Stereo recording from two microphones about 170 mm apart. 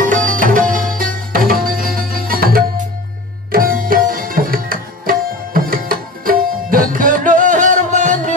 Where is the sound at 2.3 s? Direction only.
60° right (ahead or behind).